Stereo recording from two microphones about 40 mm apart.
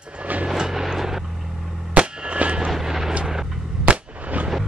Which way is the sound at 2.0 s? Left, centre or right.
Right.